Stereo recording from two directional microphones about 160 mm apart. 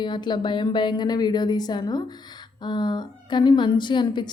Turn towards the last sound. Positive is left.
turn(degrees=30)  # may be behind; listen again after turning